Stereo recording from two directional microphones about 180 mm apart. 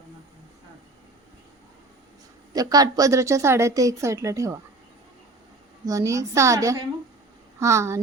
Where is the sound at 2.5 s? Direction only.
20° right (ahead or behind).